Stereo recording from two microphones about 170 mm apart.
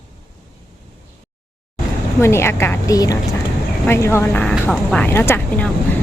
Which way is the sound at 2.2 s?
15° left (ahead or behind).